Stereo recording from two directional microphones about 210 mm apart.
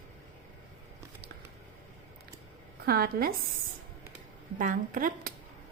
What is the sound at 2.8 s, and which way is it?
Speech, 45° right (ahead or behind).